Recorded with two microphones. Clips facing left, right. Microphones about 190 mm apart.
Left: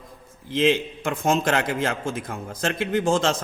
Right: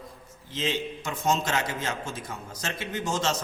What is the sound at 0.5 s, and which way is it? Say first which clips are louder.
A man's voice: left 9 dB; 55° left (ahead or behind).